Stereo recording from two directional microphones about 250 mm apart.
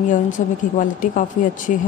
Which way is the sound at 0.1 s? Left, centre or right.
Left.